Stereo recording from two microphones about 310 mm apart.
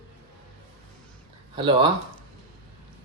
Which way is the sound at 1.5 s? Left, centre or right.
Centre.